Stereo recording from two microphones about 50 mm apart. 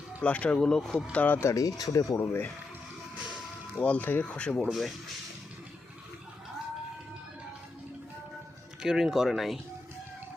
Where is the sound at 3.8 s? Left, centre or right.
Left.